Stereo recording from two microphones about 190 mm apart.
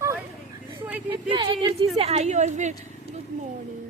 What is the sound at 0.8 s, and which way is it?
Speech, 10° right (ahead or behind).